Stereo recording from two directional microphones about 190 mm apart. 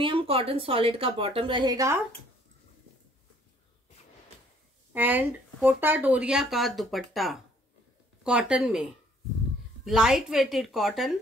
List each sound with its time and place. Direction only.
0.0 s a woman's voice: 30° right (ahead or behind)
4.9 s speech: 10° right (ahead or behind)